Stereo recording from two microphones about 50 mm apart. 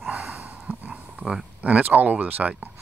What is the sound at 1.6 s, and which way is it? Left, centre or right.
Speech, right.